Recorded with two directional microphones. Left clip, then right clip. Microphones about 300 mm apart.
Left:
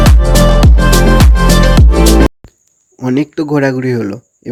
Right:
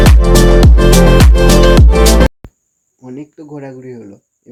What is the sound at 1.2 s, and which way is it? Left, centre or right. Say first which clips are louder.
Music: right 3 dB; centre.